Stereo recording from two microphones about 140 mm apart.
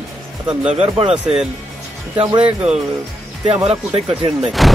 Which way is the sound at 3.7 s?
45° right (ahead or behind).